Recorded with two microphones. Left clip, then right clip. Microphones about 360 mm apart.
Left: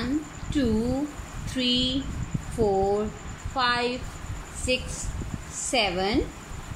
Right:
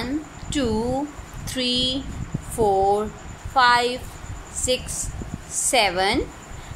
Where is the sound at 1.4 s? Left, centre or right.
Centre.